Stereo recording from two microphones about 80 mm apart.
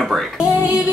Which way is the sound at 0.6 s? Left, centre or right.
Right.